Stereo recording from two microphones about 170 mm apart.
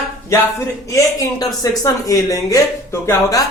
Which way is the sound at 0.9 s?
20° left (ahead or behind).